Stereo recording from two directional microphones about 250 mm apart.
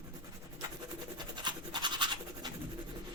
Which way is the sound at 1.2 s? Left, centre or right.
Centre.